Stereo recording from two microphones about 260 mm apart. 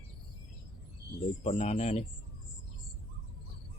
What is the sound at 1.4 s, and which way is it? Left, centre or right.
Speech, left.